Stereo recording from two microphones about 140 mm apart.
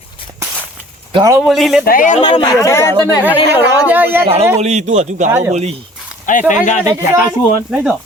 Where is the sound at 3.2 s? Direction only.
10° right (ahead or behind).